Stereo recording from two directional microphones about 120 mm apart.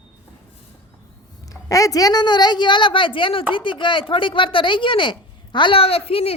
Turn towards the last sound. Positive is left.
turn(degrees=55)  # may be behind; listen again after turning